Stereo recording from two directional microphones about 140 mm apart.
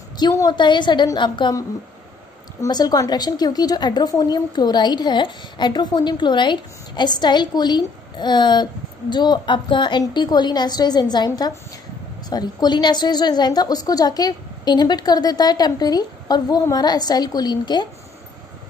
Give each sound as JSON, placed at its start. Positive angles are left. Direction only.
{"t": 0.2, "sound": "a woman's voice", "side_deg": 25}
{"t": 2.6, "sound": "a woman's voice", "side_deg": 30}